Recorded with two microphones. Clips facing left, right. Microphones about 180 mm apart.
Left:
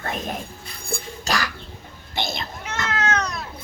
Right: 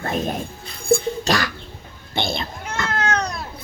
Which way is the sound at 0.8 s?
30° right (ahead or behind).